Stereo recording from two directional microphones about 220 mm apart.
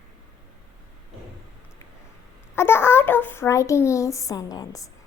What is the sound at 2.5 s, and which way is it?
A child's voice, 10° left (ahead or behind).